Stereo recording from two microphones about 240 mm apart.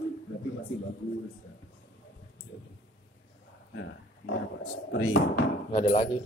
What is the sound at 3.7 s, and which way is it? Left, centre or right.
Wild animals, left.